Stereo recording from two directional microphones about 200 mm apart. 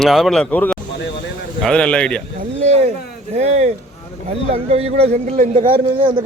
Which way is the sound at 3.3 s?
35° right (ahead or behind).